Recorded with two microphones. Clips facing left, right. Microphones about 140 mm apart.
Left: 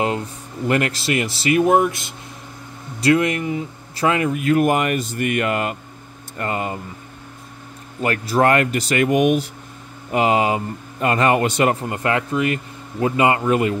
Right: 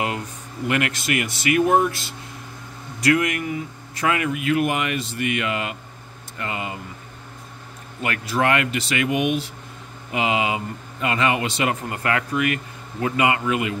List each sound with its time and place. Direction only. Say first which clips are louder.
0.7 s speech: left 3 dB; 35° left (ahead or behind)
1.6 s speech: left 2 dB; 20° left (ahead or behind)
3.0 s speech: left 3 dB; 30° left (ahead or behind); by 6.8 s 45° left (ahead or behind)
8.0 s speech: left 5 dB; 40° left (ahead or behind)
11.9 s speech: left 3 dB; 25° left (ahead or behind)